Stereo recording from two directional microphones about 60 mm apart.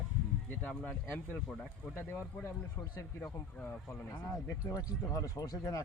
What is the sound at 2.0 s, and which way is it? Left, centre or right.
Speech, left.